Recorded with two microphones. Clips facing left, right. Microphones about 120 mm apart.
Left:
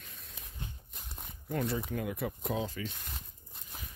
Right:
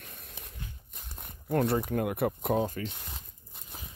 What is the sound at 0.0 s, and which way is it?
Walk, 60° right (ahead or behind).